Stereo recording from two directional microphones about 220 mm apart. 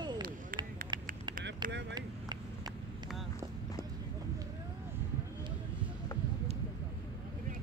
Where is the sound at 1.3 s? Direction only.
45° right (ahead or behind).